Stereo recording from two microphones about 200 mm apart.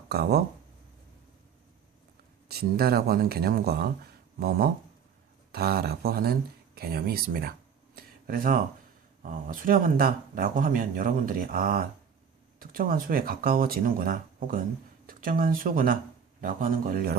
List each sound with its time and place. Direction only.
0.1 s speech: 55° right (ahead or behind)
2.5 s speech: 50° right (ahead or behind)
7.9 s a sound: 45° right (ahead or behind)
9.2 s speech: 40° right (ahead or behind)